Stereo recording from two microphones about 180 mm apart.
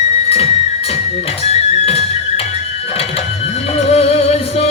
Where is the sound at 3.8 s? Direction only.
35° left (ahead or behind).